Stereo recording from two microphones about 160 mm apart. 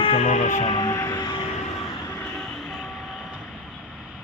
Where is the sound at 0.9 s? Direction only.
15° left (ahead or behind).